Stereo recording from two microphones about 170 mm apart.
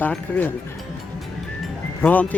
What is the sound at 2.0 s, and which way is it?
Speech, 10° left (ahead or behind).